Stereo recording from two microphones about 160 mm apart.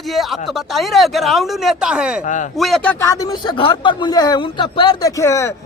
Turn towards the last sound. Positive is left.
turn(degrees=20)  # may be behind; listen again after turning